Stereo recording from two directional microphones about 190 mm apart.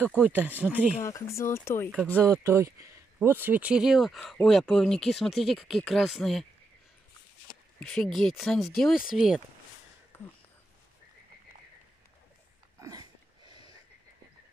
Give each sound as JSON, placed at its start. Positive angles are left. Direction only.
{"t": 0.0, "sound": "speech", "side_deg": -10}
{"t": 1.0, "sound": "speech", "side_deg": 15}
{"t": 2.2, "sound": "speech", "side_deg": -15}
{"t": 7.8, "sound": "speech", "side_deg": 5}
{"t": 10.1, "sound": "a sound", "side_deg": 10}
{"t": 12.8, "sound": "a sound", "side_deg": -20}